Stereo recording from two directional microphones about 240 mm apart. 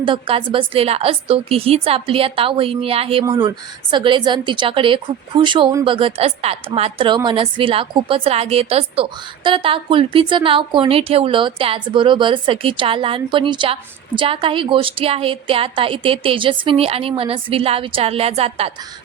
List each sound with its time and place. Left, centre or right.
0.0 s a woman's voice: right